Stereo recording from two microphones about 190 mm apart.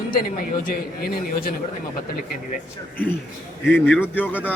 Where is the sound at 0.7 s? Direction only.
50° left (ahead or behind).